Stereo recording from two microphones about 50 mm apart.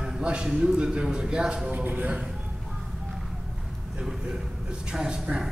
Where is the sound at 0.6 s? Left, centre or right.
Centre.